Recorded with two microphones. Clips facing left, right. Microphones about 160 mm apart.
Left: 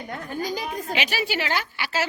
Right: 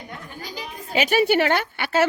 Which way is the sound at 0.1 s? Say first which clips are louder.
Left 11 dB; 45° left (ahead or behind).